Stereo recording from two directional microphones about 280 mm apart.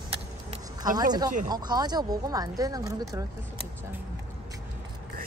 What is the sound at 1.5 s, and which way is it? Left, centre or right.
Speech, centre.